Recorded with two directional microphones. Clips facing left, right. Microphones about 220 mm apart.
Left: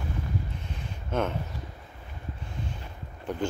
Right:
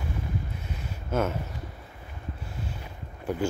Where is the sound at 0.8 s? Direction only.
5° right (ahead or behind).